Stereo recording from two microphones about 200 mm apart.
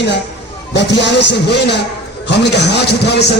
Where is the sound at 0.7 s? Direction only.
60° left (ahead or behind).